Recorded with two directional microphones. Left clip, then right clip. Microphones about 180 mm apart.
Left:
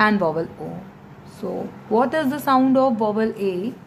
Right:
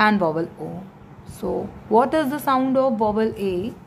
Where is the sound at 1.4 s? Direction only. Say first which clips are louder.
Right 2 dB; 30° right (ahead or behind).